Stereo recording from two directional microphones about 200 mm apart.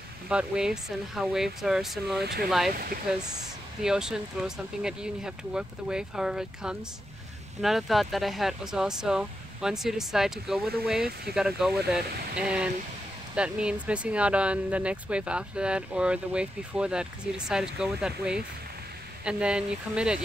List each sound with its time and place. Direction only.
0.3 s speech: 5° right (ahead or behind)
2.7 s speech: 45° right (ahead or behind)
3.2 s speech: 20° right (ahead or behind)
3.8 s speech: 5° right (ahead or behind)